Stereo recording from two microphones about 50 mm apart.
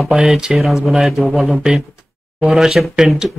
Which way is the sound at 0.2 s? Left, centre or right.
Centre.